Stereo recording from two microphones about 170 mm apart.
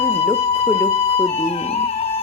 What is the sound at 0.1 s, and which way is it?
Music, 35° left (ahead or behind).